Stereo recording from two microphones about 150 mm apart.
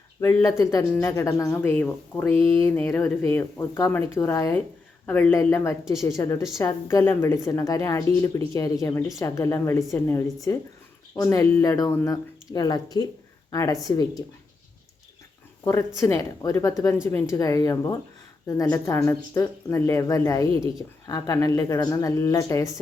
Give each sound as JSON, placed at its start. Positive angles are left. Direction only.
{"t": 0.2, "sound": "speech", "side_deg": 20}
{"t": 5.3, "sound": "a woman's voice", "side_deg": 20}
{"t": 16.0, "sound": "speech", "side_deg": 20}